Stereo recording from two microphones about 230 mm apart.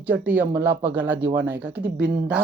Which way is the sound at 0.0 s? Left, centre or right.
Centre.